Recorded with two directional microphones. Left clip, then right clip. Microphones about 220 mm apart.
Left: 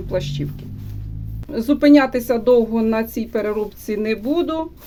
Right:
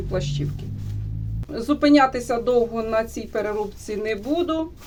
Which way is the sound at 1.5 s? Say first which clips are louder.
Left 4 dB; 45° left (ahead or behind).